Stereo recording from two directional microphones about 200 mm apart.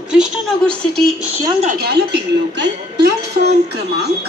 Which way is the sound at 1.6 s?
50° right (ahead or behind).